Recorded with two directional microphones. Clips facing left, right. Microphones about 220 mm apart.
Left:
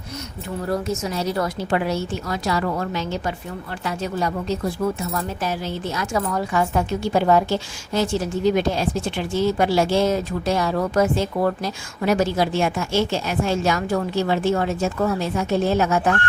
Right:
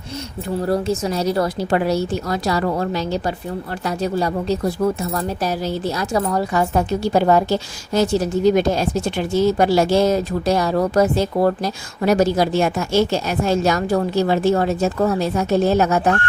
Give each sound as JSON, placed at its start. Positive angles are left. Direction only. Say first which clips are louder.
{"t": 0.6, "sound": "a woman's voice", "louder": "right 4 dB", "side_deg": -35}